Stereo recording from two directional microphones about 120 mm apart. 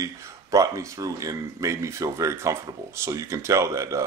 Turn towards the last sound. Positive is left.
turn(degrees=-25)  # may be behind; listen again after turning